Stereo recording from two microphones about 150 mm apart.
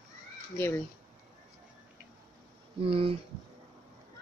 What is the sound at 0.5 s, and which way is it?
Speech, 15° left (ahead or behind).